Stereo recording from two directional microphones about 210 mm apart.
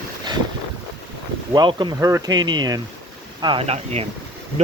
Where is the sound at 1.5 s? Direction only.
20° right (ahead or behind).